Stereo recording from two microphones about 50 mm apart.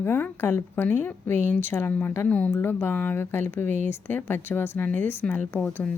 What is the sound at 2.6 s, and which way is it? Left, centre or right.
Speech, left.